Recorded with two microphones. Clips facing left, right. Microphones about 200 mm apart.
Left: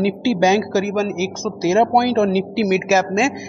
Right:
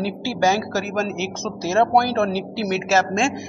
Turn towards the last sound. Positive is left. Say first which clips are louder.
# left 3 dB
turn(degrees=10)  # may be behind; listen again after turning